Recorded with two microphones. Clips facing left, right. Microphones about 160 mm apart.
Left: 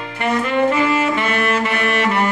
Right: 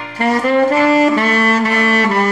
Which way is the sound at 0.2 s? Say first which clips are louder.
Right 4 dB; 40° right (ahead or behind).